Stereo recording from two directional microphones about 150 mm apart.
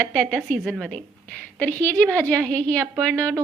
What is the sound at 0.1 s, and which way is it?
A woman's voice, 5° left (ahead or behind).